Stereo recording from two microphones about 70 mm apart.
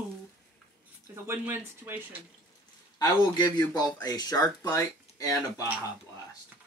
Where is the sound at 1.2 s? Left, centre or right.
Right.